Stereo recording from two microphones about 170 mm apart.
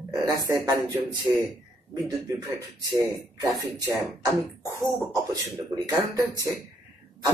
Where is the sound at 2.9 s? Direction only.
20° right (ahead or behind).